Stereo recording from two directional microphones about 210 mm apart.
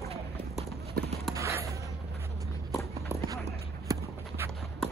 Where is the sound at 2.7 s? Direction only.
15° left (ahead or behind).